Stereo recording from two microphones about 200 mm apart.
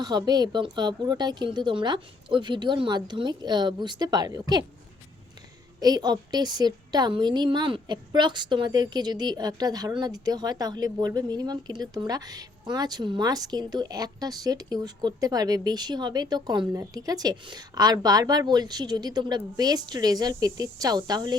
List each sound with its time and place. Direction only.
0.0 s a woman's voice: 20° right (ahead or behind)
5.8 s a woman's voice: 20° right (ahead or behind)